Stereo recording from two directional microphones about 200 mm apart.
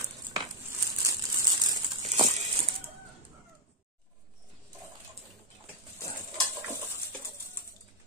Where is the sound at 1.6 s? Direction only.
20° right (ahead or behind).